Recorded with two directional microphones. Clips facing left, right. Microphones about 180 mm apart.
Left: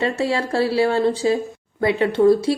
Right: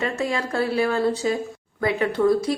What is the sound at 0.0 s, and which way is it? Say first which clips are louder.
A woman's voice: left 4 dB; 30° left (ahead or behind).